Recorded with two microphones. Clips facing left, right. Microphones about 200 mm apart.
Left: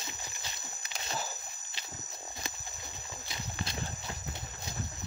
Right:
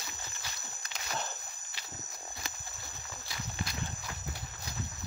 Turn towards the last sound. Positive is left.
turn(degrees=25)  # may be behind; listen again after turning